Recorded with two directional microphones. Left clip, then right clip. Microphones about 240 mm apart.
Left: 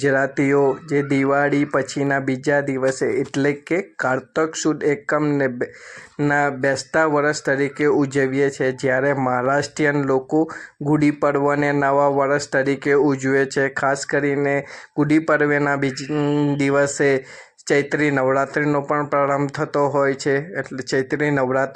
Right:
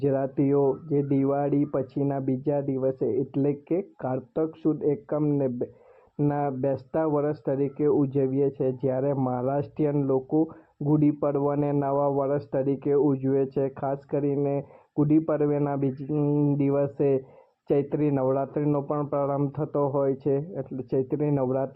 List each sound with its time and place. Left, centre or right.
0.0 s speech: left